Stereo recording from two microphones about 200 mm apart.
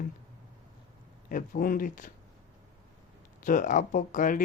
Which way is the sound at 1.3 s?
45° left (ahead or behind).